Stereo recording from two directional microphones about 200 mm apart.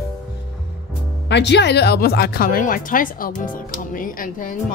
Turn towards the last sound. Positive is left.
turn(degrees=45)  # may be behind; listen again after turning